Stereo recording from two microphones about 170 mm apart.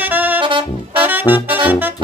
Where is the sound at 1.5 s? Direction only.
10° right (ahead or behind).